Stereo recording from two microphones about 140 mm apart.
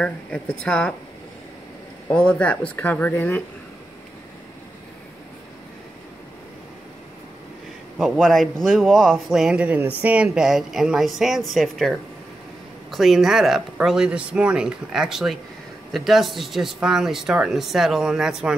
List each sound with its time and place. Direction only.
0.0 s speech: 5° left (ahead or behind)
2.0 s speech: 10° left (ahead or behind)
8.0 s speech: centre (ahead or behind)